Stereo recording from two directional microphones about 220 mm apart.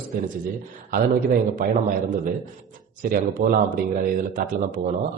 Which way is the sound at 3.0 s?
40° right (ahead or behind).